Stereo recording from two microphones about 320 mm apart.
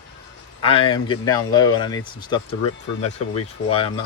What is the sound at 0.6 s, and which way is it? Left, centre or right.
Speech, centre.